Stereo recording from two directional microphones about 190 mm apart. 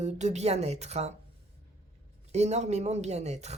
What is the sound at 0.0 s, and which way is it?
Speech, 35° right (ahead or behind).